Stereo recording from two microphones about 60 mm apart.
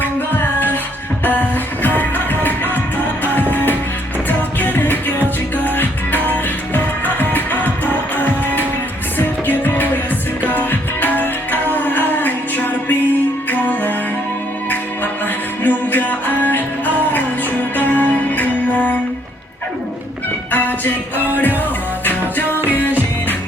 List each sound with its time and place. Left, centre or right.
0.0 s music: left
1.8 s music: left
4.3 s music: left
15.6 s music: left
20.5 s music: left